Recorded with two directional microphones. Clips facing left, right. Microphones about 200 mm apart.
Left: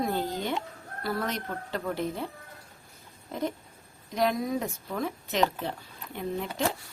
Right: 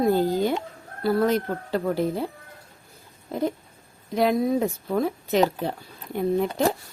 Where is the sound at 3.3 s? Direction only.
35° right (ahead or behind).